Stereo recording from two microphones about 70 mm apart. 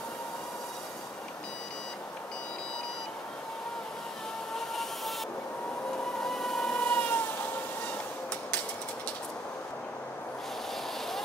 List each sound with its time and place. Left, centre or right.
4.6 s vehicle: centre
6.2 s vehicle: centre
6.8 s vehicle: centre